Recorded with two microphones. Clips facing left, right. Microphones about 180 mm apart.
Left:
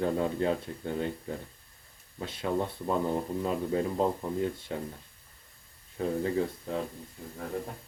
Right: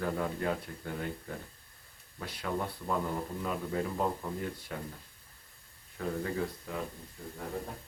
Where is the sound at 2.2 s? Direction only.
25° left (ahead or behind).